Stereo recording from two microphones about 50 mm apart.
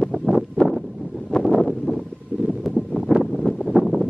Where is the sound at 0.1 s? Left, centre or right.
Centre.